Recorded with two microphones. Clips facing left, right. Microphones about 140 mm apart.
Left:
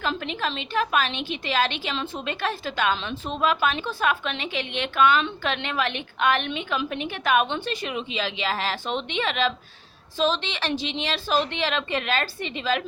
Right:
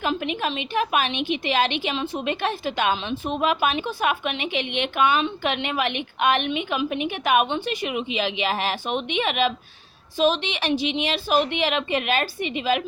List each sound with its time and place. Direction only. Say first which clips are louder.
0.0 s a woman's voice: right 3 dB; 15° right (ahead or behind)